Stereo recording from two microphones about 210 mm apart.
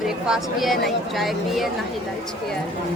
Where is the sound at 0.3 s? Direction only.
Centre (ahead or behind).